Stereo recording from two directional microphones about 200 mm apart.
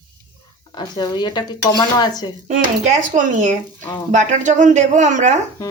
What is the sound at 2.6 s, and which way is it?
Speech, 35° right (ahead or behind).